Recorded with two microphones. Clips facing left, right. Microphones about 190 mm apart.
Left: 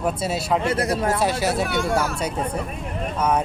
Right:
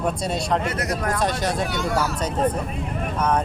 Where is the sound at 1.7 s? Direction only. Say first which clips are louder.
Left 3 dB; 50° left (ahead or behind).